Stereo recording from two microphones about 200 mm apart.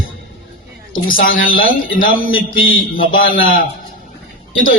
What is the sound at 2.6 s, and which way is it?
Speech, 80° left.